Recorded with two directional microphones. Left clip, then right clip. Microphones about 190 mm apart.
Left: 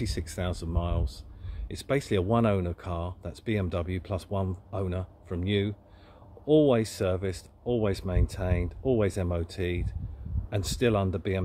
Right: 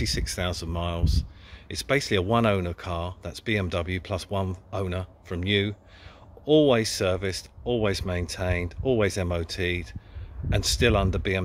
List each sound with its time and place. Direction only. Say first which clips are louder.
0.0 s speech: right 5 dB; centre (ahead or behind)